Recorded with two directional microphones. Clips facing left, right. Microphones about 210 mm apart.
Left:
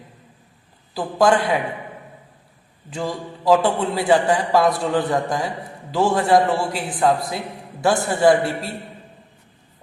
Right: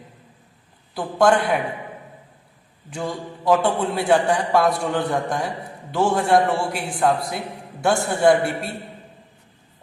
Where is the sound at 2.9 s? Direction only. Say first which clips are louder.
Left 1 dB; centre (ahead or behind).